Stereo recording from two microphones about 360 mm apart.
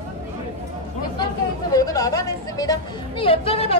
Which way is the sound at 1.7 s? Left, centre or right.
Centre.